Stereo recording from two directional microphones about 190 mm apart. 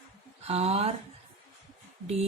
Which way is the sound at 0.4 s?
35° right (ahead or behind).